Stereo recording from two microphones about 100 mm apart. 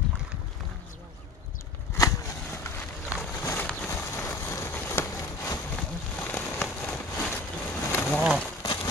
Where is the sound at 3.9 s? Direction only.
25° left (ahead or behind).